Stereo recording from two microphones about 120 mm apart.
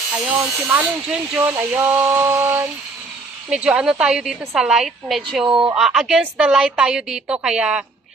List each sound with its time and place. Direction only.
0.3 s a woman's voice: 15° right (ahead or behind)
1.4 s a sound: 20° right (ahead or behind)
3.4 s a woman's voice: 10° right (ahead or behind)